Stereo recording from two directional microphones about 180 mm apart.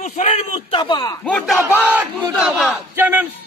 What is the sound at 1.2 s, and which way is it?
A man's voice, centre (ahead or behind).